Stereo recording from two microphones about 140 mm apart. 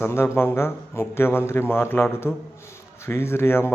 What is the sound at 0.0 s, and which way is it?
A man's voice, 15° left (ahead or behind).